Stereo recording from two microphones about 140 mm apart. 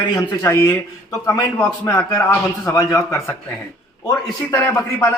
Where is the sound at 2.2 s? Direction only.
20° left (ahead or behind).